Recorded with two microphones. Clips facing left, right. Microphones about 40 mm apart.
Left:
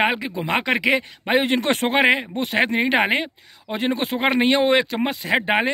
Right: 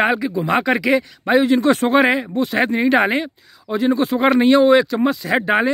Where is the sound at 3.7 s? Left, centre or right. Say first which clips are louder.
Right 6 dB; left.